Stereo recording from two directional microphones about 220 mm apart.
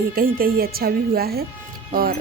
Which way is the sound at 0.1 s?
40° right (ahead or behind).